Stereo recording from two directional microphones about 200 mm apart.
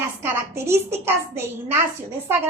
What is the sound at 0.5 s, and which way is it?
Speech, 15° right (ahead or behind).